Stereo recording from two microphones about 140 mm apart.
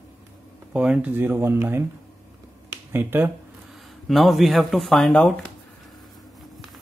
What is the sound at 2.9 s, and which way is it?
Speech, 15° right (ahead or behind).